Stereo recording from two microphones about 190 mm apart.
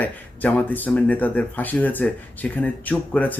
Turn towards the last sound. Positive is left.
turn(degrees=10)  # may be behind; listen again after turning